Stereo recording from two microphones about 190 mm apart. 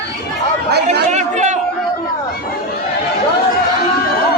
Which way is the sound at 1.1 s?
40° right (ahead or behind).